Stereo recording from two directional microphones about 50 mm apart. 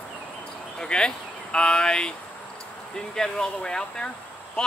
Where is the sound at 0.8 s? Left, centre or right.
Centre.